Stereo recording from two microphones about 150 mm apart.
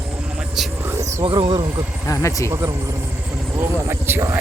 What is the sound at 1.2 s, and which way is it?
Speech, 35° right (ahead or behind).